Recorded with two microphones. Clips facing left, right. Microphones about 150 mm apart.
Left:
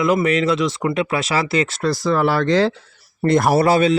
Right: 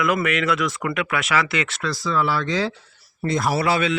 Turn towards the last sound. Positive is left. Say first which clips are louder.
# left 6 dB
turn(degrees=40)  # may be behind; listen again after turning